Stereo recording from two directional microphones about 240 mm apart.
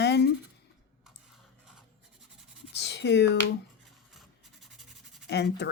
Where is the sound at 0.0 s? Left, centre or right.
Left.